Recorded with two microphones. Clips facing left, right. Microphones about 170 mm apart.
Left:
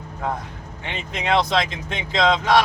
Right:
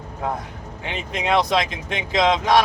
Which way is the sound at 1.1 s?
10° right (ahead or behind).